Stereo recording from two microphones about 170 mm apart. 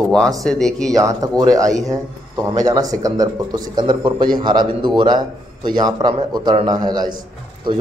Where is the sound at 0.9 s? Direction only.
20° right (ahead or behind).